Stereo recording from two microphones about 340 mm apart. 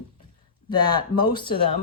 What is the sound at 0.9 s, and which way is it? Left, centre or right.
Speech, centre.